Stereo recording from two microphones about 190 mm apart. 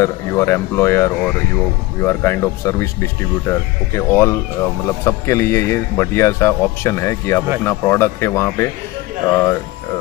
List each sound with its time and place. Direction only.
0.0 s speech: 15° left (ahead or behind)